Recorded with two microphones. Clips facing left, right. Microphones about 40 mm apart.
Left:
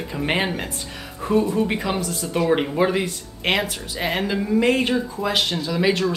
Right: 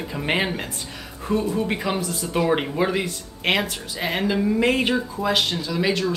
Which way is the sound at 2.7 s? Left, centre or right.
Centre.